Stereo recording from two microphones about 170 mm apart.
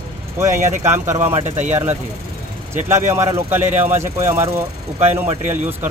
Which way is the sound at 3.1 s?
15° right (ahead or behind).